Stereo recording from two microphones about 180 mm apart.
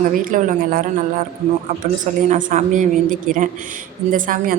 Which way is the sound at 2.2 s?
45° right (ahead or behind).